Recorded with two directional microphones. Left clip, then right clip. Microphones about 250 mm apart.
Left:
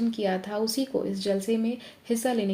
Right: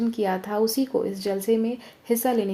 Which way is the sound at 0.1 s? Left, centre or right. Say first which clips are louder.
Right 3 dB; right.